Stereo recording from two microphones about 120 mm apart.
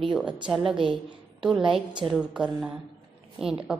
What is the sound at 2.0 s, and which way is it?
A woman's voice, 5° right (ahead or behind).